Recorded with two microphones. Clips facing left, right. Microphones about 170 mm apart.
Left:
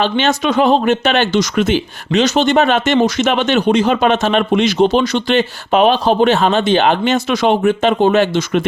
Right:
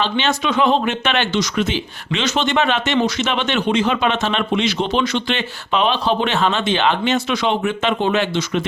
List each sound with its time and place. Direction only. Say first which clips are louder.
0.0 s speech: left 5 dB; 45° left (ahead or behind)